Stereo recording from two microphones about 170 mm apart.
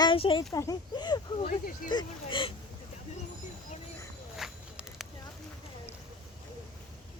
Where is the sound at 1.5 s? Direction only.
55° left (ahead or behind).